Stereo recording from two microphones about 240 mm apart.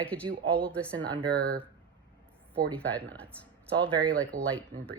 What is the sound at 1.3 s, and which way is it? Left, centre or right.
Speech, right.